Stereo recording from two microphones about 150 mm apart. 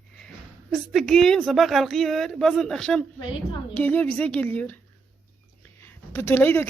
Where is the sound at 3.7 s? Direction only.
10° left (ahead or behind).